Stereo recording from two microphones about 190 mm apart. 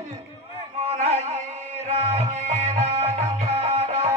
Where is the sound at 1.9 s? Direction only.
35° right (ahead or behind).